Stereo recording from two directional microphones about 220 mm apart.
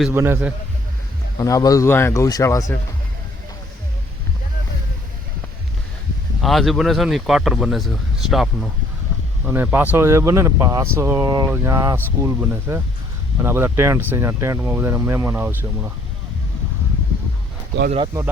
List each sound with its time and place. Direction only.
0.0 s speech: 10° right (ahead or behind)
1.4 s speech: 15° left (ahead or behind)
6.4 s speech: centre (ahead or behind)
17.9 s speech: 20° right (ahead or behind)